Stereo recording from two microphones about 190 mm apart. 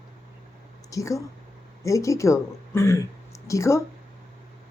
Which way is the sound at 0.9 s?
15° left (ahead or behind).